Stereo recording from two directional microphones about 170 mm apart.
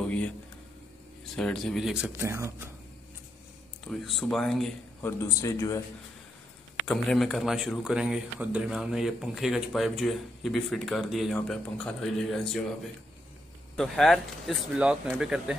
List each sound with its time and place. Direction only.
0.0 s a sound: 5° left (ahead or behind)
1.3 s a man's voice: 5° left (ahead or behind); by 2.7 s 15° right (ahead or behind)
3.8 s a man's voice: centre (ahead or behind)
5.0 s speech: 15° left (ahead or behind)
6.9 s a man's voice: centre (ahead or behind)
13.7 s a man's voice: centre (ahead or behind)